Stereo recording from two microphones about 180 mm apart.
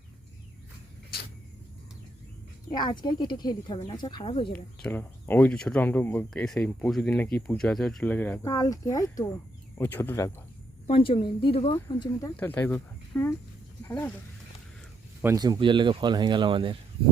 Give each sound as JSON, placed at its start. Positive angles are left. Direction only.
{"t": 2.7, "sound": "a woman's voice", "side_deg": 25}
{"t": 4.5, "sound": "speech", "side_deg": 10}
{"t": 8.4, "sound": "a woman's voice", "side_deg": 20}
{"t": 10.9, "sound": "a woman's voice", "side_deg": 30}
{"t": 12.4, "sound": "speech", "side_deg": 10}
{"t": 15.2, "sound": "speech", "side_deg": -15}